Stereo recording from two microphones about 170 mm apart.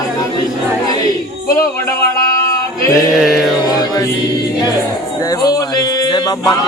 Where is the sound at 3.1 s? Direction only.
Centre (ahead or behind).